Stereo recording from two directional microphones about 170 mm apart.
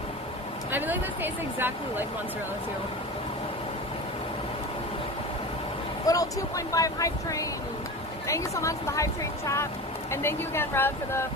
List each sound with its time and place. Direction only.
0.7 s speech: 10° right (ahead or behind)
6.1 s speech: 20° left (ahead or behind)
10.1 s speech: 15° left (ahead or behind)